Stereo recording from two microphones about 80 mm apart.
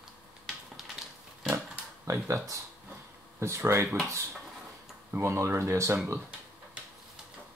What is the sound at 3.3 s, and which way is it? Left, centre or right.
Speech, right.